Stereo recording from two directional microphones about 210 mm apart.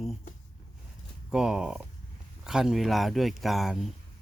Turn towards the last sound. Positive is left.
turn(degrees=0)  # may be behind; listen again after turning